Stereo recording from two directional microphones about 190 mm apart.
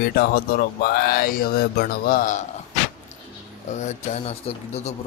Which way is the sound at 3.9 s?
40° left (ahead or behind).